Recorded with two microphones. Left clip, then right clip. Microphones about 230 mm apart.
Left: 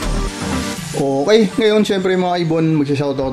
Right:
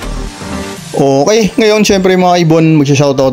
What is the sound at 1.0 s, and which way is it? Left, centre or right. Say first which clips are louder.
Speech: right 5 dB; right.